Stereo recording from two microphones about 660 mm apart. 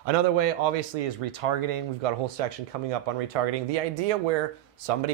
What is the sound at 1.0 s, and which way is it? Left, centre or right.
Speech, right.